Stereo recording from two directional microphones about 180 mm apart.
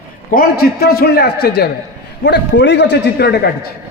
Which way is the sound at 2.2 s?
80° left.